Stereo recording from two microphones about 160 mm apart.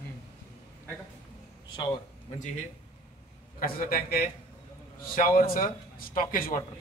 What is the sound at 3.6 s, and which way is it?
A man's voice, 65° left (ahead or behind).